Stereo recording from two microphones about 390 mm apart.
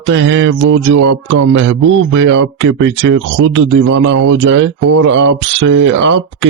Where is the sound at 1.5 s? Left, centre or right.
Right.